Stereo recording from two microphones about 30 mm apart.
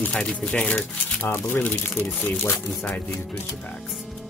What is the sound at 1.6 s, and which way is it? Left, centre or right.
Speech, left.